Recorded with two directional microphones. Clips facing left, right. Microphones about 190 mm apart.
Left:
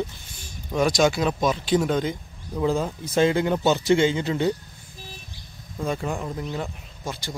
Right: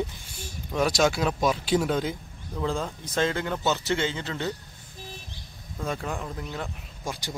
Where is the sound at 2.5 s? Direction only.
10° left (ahead or behind).